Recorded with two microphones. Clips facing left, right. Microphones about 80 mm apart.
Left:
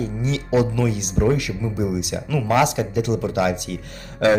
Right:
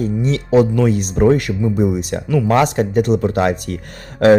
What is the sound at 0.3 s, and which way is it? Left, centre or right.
Speech, right.